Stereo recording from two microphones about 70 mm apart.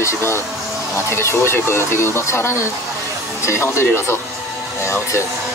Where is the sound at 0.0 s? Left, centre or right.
Left.